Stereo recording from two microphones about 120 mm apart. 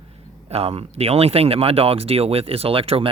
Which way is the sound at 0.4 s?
55° right (ahead or behind).